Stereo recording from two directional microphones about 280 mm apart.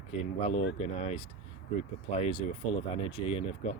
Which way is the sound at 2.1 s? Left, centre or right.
Left.